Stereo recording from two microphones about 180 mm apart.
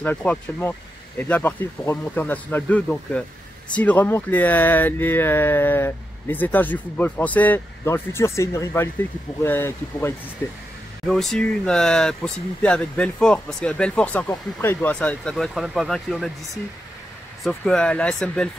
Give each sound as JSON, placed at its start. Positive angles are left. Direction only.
{"t": 0.0, "sound": "speech", "side_deg": 10}
{"t": 11.1, "sound": "speech", "side_deg": 0}
{"t": 17.4, "sound": "speech", "side_deg": 0}